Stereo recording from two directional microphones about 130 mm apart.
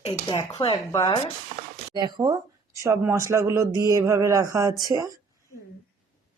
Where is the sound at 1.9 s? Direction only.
35° right (ahead or behind).